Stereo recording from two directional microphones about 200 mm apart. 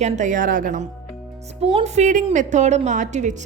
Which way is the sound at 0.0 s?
40° right (ahead or behind).